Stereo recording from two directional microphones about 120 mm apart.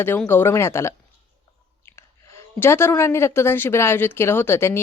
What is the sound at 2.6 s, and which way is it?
Speech, 20° left (ahead or behind).